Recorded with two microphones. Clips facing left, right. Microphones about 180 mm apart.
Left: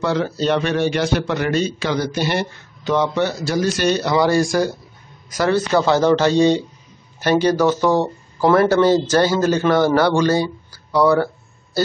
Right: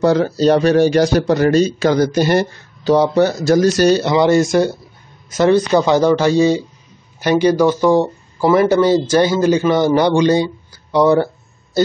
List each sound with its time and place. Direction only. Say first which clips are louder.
0.0 s speech: right 6 dB; 40° right (ahead or behind)
4.0 s speech: right 4 dB; 20° right (ahead or behind)